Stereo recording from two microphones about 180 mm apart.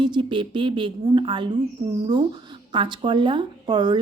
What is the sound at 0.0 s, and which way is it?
Speech, 25° right (ahead or behind).